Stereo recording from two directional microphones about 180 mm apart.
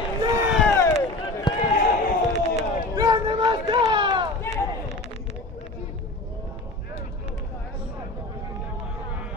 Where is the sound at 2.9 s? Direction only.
20° right (ahead or behind).